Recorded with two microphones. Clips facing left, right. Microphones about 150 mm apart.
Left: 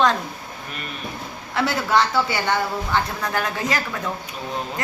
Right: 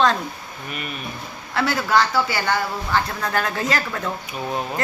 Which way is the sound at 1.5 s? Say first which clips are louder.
Even; 20° left (ahead or behind).